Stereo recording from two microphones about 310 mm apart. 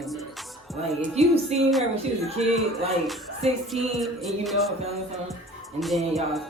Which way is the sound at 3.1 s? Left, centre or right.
Centre.